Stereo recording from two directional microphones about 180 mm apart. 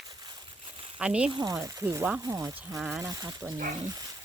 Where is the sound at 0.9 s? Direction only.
5° right (ahead or behind).